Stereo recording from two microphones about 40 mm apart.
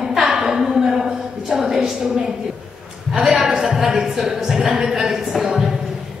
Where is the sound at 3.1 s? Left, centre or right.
Centre.